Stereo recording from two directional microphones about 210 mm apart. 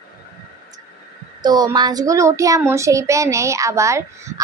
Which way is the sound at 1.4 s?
20° right (ahead or behind).